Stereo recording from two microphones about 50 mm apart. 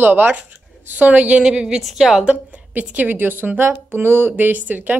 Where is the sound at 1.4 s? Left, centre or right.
Centre.